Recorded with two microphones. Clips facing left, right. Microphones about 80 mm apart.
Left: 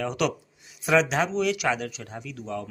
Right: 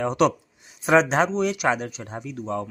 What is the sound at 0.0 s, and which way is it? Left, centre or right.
Speech, right.